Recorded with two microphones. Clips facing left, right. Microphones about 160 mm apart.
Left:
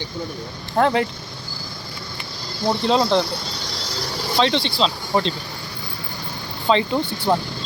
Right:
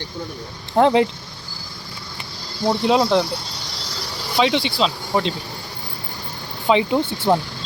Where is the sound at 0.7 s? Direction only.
20° right (ahead or behind).